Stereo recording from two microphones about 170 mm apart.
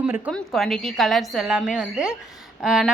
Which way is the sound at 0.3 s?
Centre (ahead or behind).